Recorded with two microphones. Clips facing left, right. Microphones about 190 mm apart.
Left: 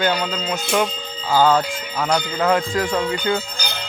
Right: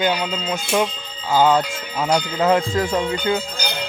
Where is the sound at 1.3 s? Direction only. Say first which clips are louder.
Even; 20° right (ahead or behind).